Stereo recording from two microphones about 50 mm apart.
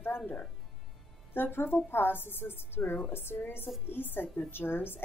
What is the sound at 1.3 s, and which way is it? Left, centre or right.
A woman's voice, left.